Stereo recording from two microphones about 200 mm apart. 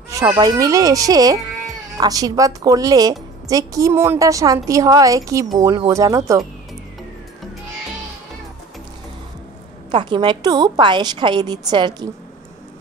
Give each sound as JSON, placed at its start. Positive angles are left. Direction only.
{"t": 0.3, "sound": "a woman's voice", "side_deg": -20}
{"t": 9.8, "sound": "a woman's voice", "side_deg": -25}